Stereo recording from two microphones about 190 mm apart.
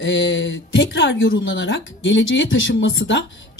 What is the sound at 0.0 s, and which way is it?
Speech, 75° left (ahead or behind).